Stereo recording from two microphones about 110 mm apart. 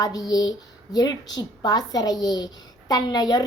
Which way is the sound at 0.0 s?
35° left (ahead or behind).